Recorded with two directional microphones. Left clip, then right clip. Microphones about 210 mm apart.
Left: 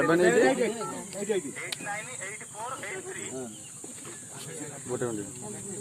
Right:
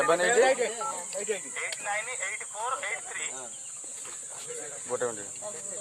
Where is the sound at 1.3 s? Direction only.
40° right (ahead or behind).